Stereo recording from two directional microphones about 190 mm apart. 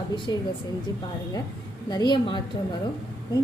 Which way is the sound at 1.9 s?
20° left (ahead or behind).